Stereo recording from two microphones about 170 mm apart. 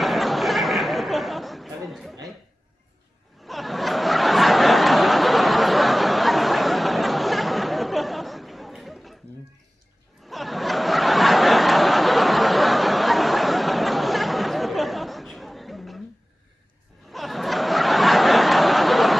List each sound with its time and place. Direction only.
0.0 s chatter: centre (ahead or behind)
3.4 s snicker: centre (ahead or behind)
10.2 s snicker: centre (ahead or behind)
17.1 s snicker: centre (ahead or behind)